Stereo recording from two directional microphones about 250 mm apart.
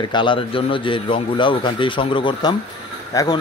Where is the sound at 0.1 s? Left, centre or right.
Centre.